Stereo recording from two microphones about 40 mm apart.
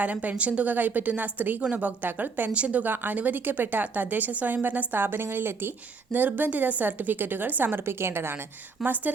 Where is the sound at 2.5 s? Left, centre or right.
Right.